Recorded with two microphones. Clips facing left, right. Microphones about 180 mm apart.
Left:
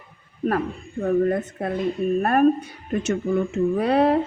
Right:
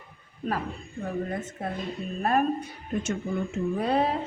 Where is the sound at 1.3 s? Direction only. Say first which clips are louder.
Left 8 dB; 60° left (ahead or behind).